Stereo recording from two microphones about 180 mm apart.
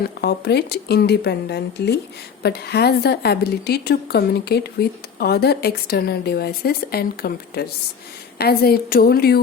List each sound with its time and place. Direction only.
0.2 s a woman's voice: 65° left (ahead or behind)